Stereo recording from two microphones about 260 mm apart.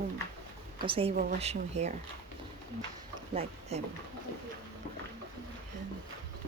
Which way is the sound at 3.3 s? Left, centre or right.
Right.